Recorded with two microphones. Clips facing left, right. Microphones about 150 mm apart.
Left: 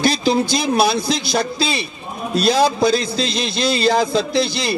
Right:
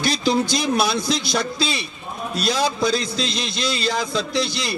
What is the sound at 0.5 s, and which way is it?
A man's voice, 30° left (ahead or behind).